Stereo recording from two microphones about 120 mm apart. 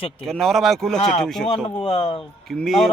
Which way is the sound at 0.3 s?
Centre (ahead or behind).